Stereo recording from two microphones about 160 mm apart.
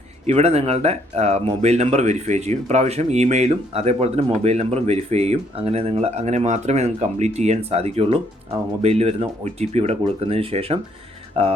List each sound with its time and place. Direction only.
0.3 s speech: 40° right (ahead or behind)